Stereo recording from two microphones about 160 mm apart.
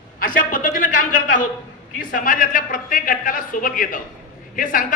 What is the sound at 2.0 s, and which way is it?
Speech, 60° left (ahead or behind).